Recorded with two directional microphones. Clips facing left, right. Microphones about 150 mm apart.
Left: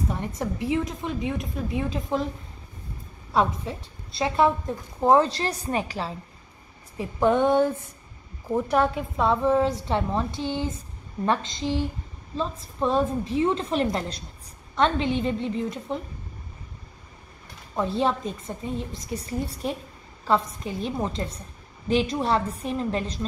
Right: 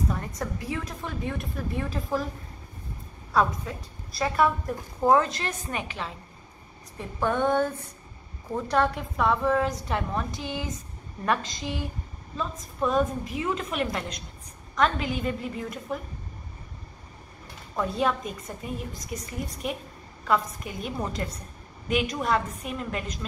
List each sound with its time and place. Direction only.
0.1 s speech: 25° left (ahead or behind)
3.3 s a woman's voice: 25° left (ahead or behind)
7.0 s speech: 20° left (ahead or behind)
17.7 s a woman's voice: 30° left (ahead or behind)